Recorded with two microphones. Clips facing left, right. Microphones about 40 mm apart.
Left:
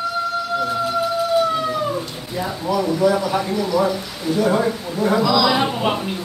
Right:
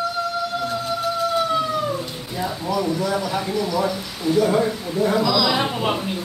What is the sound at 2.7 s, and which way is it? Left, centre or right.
A man's voice, centre.